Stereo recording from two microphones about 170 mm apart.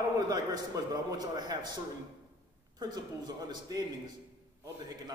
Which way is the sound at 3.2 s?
25° right (ahead or behind).